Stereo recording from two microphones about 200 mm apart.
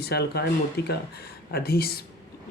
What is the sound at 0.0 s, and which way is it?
Speech, 55° left (ahead or behind).